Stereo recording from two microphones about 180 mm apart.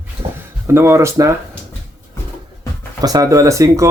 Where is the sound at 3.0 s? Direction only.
20° right (ahead or behind).